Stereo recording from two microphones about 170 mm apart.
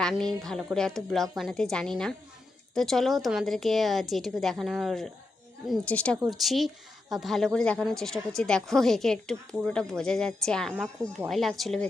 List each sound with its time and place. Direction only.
0.0 s speech: 5° left (ahead or behind)